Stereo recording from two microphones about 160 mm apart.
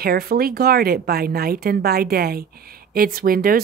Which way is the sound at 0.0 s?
70° right (ahead or behind).